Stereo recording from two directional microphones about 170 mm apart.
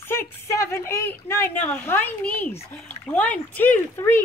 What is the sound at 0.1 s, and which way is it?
Speech, 15° left (ahead or behind).